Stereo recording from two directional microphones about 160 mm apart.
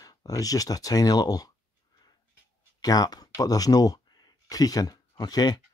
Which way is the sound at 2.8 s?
25° left (ahead or behind).